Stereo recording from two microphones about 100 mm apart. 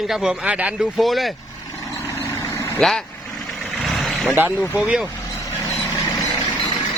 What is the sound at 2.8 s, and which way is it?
Speech, 5° left (ahead or behind).